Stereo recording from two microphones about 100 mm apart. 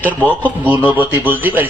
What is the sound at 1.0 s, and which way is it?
Speech, 20° right (ahead or behind).